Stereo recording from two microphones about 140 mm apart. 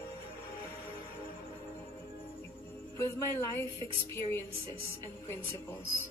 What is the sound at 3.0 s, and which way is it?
Speech, 20° left (ahead or behind).